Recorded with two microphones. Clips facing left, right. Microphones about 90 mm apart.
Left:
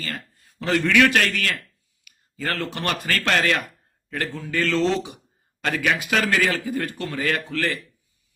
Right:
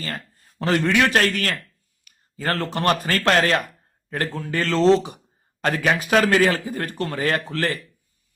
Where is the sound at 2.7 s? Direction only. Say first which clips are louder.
Right 5 dB; 40° right (ahead or behind).